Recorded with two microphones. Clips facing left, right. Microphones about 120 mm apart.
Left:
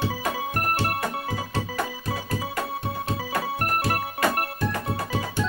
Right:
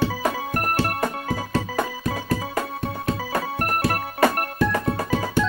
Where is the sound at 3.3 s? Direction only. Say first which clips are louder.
Even; 45° right (ahead or behind).